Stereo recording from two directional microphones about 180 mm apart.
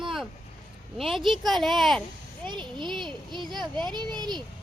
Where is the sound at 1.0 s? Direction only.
Centre (ahead or behind).